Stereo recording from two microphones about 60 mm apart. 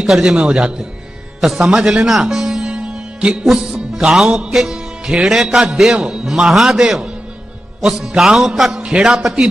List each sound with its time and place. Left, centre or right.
0.0 s music: centre
1.4 s music: centre
3.4 s music: centre
5.9 s music: centre
8.2 s music: centre